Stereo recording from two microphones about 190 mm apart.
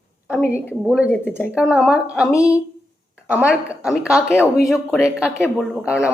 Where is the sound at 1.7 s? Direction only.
5° right (ahead or behind).